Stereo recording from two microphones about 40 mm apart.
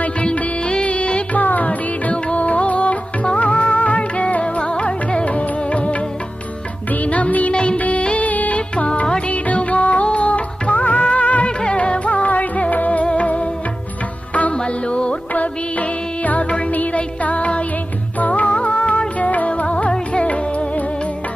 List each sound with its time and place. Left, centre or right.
0.7 s music: left
1.4 s music: left
7.0 s music: left
7.5 s music of bollywood: left
7.8 s music: left
9.3 s music of bollywood: left
11.6 s music: left
14.8 s music: left
16.2 s music: left